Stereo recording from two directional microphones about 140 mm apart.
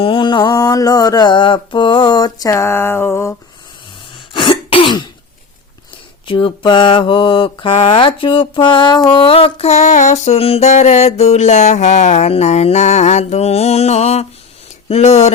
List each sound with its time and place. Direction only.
0.0 s mantra: 35° left (ahead or behind); by 3.3 s 20° left (ahead or behind)
4.4 s throat clearing: 35° left (ahead or behind)
6.2 s mantra: 35° left (ahead or behind)
9.1 s music: 40° left (ahead or behind)
14.8 s speech: 50° left (ahead or behind)